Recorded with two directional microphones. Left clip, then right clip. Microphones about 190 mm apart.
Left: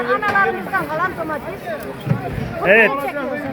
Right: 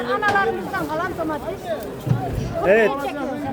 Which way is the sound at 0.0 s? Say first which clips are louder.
Left 3 dB; 35° left (ahead or behind).